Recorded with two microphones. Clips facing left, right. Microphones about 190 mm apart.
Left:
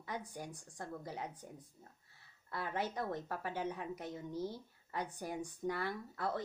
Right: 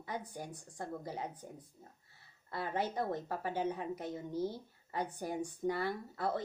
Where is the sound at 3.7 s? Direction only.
45° right (ahead or behind).